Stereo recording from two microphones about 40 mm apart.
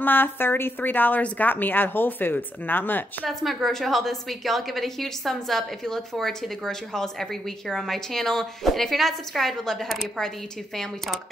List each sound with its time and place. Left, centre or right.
0.0 s speech: left
3.3 s a woman's voice: centre